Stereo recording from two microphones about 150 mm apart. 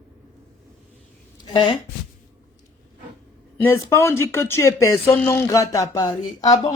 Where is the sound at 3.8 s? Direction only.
15° left (ahead or behind).